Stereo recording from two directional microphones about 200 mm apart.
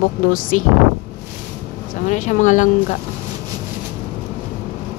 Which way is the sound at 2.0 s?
40° left (ahead or behind).